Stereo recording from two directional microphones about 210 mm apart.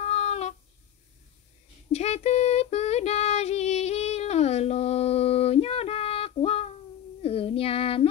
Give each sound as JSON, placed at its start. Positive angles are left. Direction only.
{"t": 0.0, "sound": "a sound", "side_deg": 30}
{"t": 1.9, "sound": "child singing", "side_deg": 30}
{"t": 7.2, "sound": "female singing", "side_deg": 25}